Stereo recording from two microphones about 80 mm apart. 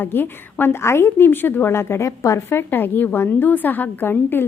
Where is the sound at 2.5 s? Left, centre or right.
Left.